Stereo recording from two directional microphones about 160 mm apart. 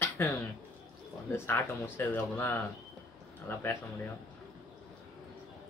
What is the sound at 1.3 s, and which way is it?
Speech, 15° left (ahead or behind).